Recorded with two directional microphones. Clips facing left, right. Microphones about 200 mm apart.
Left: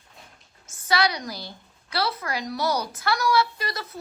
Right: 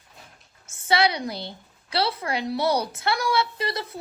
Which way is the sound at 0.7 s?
25° right (ahead or behind).